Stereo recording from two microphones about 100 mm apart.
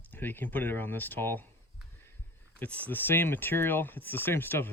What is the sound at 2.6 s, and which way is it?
Speech, 15° left (ahead or behind).